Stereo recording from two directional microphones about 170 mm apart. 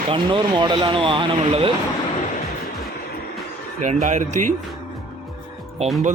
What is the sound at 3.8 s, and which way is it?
Speech, 45° right (ahead or behind).